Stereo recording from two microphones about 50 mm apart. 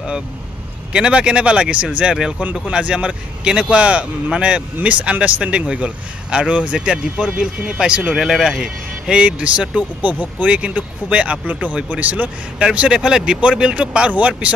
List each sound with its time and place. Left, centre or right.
0.9 s speech: centre
8.1 s speech: centre
9.1 s speech: right
12.5 s speech: right